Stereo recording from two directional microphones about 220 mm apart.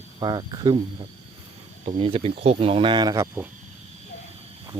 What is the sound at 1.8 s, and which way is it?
Speech, 25° right (ahead or behind).